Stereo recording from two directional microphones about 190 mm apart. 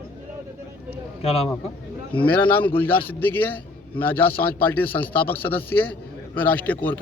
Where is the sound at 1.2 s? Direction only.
30° left (ahead or behind).